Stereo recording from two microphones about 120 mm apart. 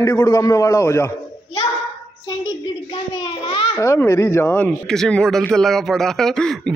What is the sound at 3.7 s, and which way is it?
Speech, 25° left (ahead or behind).